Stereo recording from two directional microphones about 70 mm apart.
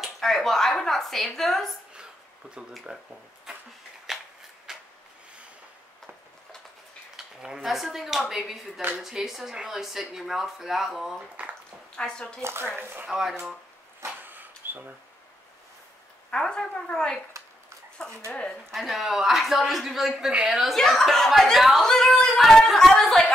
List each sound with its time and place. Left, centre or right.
0.0 s speech: centre
2.9 s speech: centre
4.1 s a sound: centre
7.4 s speech: centre
12.0 s speech: centre
12.4 s speech: right
14.2 s a sound: right
16.3 s speech: centre
18.7 s speech: centre